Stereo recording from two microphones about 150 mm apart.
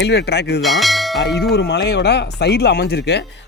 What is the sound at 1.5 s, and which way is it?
Speech, 90° left.